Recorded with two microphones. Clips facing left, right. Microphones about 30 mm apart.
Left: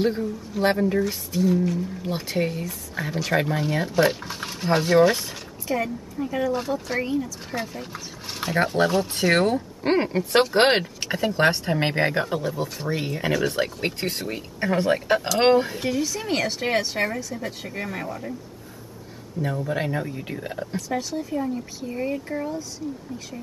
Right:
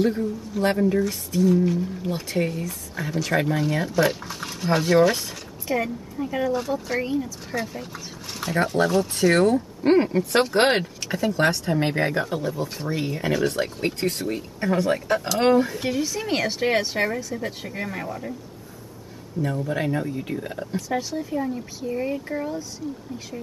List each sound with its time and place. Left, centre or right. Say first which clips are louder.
0.6 s speech: even; centre
2.3 s speech: even; centre
5.7 s speech: right 1 dB; centre
7.9 s speech: left 1 dB; centre
13.3 s speech: right 1 dB; centre
13.6 s speech: even; centre
15.8 s speech: even; centre
19.4 s speech: right 1 dB; centre
20.7 s speech: right 2 dB; centre